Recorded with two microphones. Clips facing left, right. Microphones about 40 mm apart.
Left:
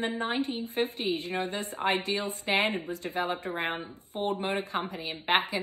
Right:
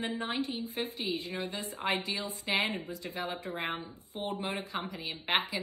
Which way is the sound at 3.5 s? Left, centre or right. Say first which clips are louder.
Left 4 dB; left.